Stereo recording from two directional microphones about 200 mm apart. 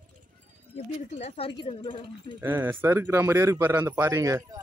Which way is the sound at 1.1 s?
30° left (ahead or behind).